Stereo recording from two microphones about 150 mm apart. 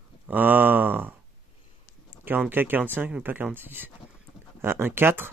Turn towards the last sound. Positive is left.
turn(degrees=-15)  # may be behind; listen again after turning